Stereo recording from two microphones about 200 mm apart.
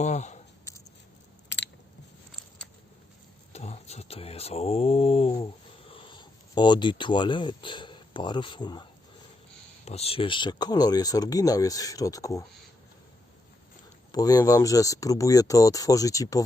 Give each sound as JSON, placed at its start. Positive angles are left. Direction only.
{"t": 0.0, "sound": "a sound", "side_deg": 35}
{"t": 1.5, "sound": "biting", "side_deg": 60}
{"t": 3.5, "sound": "speech", "side_deg": 30}
{"t": 14.1, "sound": "speech", "side_deg": 20}